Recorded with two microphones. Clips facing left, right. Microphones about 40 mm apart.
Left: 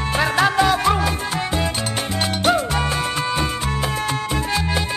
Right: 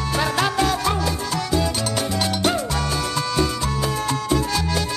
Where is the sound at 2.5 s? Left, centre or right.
Left.